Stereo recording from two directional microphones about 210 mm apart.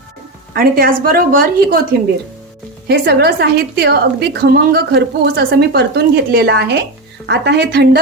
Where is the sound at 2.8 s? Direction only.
50° right (ahead or behind).